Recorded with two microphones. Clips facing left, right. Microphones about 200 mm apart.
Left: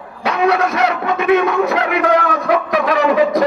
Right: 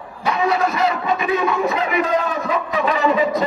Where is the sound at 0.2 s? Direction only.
75° left (ahead or behind).